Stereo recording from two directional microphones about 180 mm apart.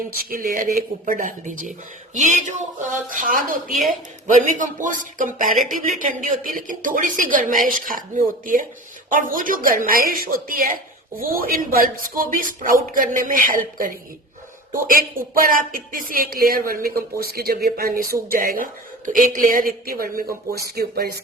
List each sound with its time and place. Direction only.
0.3 s speech: 50° right (ahead or behind)
3.7 s speech: centre (ahead or behind)
4.5 s speech: 45° right (ahead or behind)